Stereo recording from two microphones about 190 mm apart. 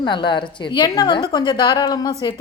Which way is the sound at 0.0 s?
25° left (ahead or behind).